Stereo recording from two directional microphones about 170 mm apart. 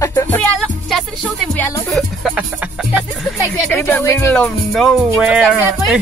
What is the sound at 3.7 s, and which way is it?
Speech, 10° left (ahead or behind).